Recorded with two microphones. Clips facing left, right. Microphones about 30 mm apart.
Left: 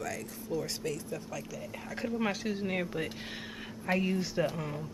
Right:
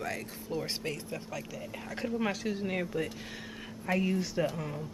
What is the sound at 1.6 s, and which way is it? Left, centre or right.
Speech, centre.